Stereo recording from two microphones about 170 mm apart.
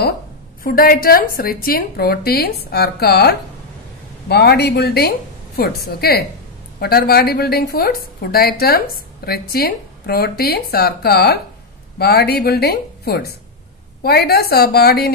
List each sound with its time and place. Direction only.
0.7 s a woman's voice: 60° left (ahead or behind)